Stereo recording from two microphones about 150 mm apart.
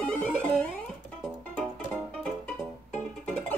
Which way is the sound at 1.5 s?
5° left (ahead or behind).